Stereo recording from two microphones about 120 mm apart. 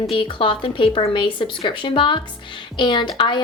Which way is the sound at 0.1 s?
45° left (ahead or behind).